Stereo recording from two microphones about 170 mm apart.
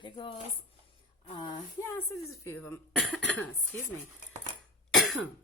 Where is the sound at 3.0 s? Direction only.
Centre (ahead or behind).